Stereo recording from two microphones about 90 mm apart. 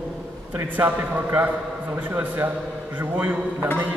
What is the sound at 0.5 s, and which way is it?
A man's voice, 20° right (ahead or behind).